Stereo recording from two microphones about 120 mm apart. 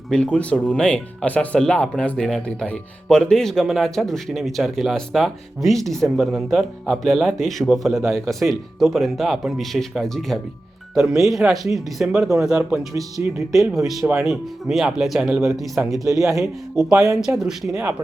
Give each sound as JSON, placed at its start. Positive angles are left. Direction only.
{"t": 0.1, "sound": "speech", "side_deg": 10}
{"t": 12.9, "sound": "speech", "side_deg": -30}
{"t": 13.5, "sound": "speech", "side_deg": 0}
{"t": 16.0, "sound": "speech", "side_deg": -25}
{"t": 17.2, "sound": "speech", "side_deg": -5}